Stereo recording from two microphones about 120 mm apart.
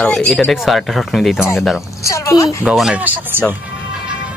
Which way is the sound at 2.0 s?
25° left (ahead or behind).